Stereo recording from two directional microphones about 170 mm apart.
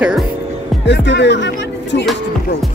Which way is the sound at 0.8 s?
90° left.